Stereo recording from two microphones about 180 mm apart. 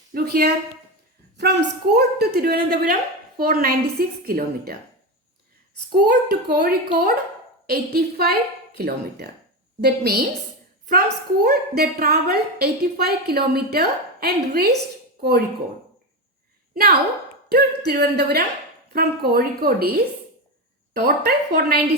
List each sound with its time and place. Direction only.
0.1 s a woman's voice: 60° right (ahead or behind)
6.0 s a woman's voice: 60° right (ahead or behind)
16.7 s a woman's voice: 55° right (ahead or behind)